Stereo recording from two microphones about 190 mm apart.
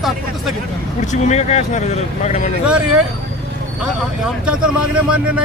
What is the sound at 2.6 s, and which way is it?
Speech, 5° right (ahead or behind).